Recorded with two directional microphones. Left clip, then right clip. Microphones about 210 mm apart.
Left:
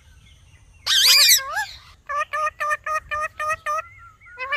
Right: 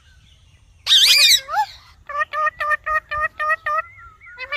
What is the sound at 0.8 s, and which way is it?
Bird, 10° right (ahead or behind).